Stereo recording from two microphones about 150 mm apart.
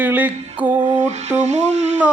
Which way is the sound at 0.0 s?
10° right (ahead or behind).